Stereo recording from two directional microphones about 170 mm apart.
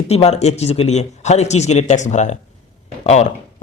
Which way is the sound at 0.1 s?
40° left (ahead or behind).